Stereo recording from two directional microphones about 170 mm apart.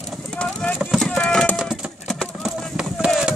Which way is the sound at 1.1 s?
5° left (ahead or behind).